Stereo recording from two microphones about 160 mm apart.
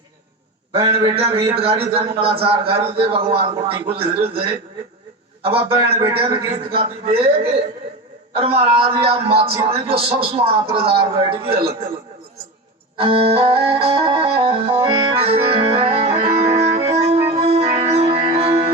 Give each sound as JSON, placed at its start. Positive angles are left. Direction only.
{"t": 0.7, "sound": "a man's voice", "side_deg": -35}
{"t": 5.5, "sound": "a man's voice", "side_deg": -35}
{"t": 13.0, "sound": "music", "side_deg": -35}